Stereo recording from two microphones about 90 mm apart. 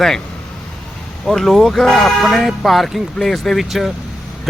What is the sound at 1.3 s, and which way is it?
Speech, 5° left (ahead or behind).